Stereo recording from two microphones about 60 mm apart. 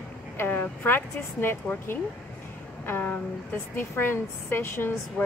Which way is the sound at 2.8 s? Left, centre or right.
Left.